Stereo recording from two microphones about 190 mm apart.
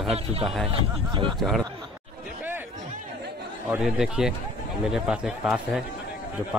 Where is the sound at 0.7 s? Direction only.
25° right (ahead or behind).